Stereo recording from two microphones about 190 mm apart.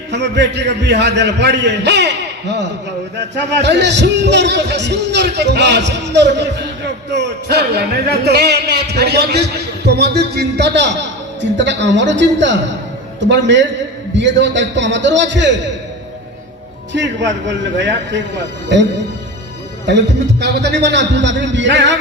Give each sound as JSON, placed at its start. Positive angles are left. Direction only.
{"t": 0.1, "sound": "a man's voice", "side_deg": -65}
{"t": 16.9, "sound": "a man's voice", "side_deg": -70}